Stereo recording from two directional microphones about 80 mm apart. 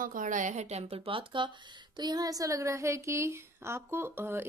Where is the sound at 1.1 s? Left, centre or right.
Right.